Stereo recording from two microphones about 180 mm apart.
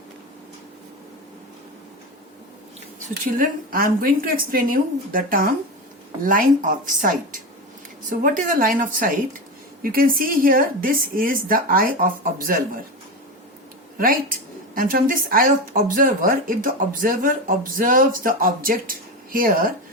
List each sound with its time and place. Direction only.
3.3 s speech: 50° right (ahead or behind)
14.0 s speech: 50° right (ahead or behind)